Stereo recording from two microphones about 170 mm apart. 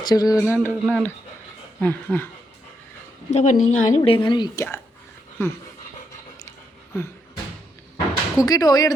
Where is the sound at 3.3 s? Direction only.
45° left (ahead or behind).